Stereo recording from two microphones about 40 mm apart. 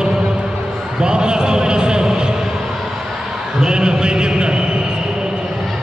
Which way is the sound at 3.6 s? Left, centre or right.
Centre.